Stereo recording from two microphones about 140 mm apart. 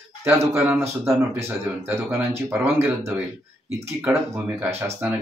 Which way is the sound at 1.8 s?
20° right (ahead or behind).